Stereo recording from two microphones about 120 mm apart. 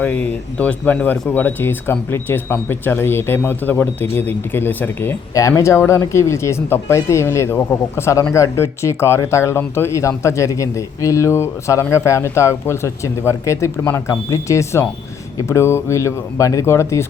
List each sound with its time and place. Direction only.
0.0 s speech: 10° left (ahead or behind)